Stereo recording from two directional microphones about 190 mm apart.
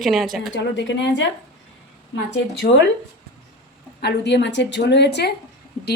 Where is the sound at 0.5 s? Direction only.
70° left (ahead or behind).